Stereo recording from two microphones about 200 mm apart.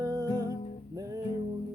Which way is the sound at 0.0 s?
20° right (ahead or behind).